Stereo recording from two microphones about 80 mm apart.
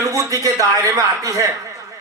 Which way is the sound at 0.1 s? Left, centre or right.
Right.